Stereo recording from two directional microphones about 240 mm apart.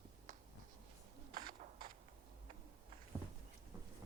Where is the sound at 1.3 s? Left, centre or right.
Right.